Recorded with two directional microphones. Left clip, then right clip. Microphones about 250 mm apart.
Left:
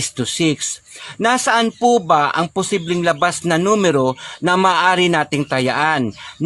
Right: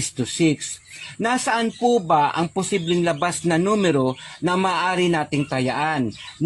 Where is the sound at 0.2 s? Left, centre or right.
Left.